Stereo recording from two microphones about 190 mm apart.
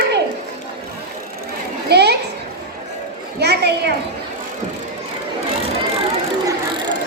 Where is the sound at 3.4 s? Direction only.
60° right (ahead or behind).